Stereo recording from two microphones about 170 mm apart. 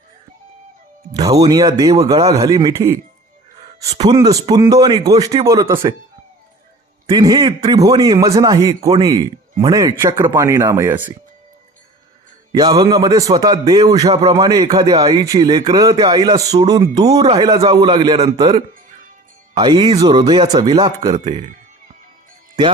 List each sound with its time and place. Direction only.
1.1 s a man's voice: 20° right (ahead or behind)
7.2 s a man's voice: 20° right (ahead or behind)
12.5 s a man's voice: 25° right (ahead or behind)
14.1 s speech: 35° right (ahead or behind)
14.3 s a man's voice: 20° right (ahead or behind)
17.1 s speech: 35° right (ahead or behind)
17.4 s a man's voice: 20° right (ahead or behind)
21.2 s speech: 40° right (ahead or behind)